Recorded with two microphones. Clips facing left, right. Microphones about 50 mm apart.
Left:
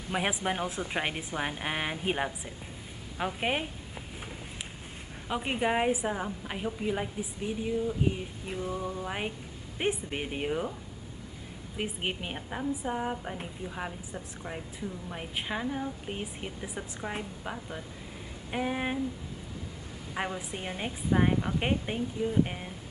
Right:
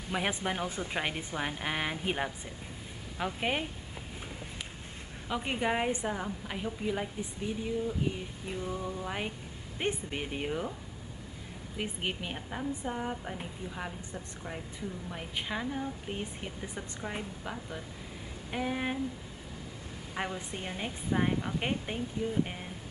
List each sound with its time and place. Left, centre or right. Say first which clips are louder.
0.1 s a woman's voice: left 2 dB; centre
5.3 s a woman's voice: left 2 dB; centre
8.6 s a sound: left 3 dB; left
9.0 s a woman's voice: left 2 dB; centre
11.7 s a woman's voice: left 2 dB; centre
20.2 s a woman's voice: left 2 dB; centre